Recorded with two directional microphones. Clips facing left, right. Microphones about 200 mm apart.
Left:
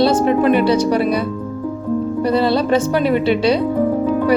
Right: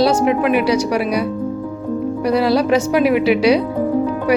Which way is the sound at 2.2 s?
10° right (ahead or behind).